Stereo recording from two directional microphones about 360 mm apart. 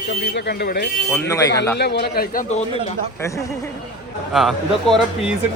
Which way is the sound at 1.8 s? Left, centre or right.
Left.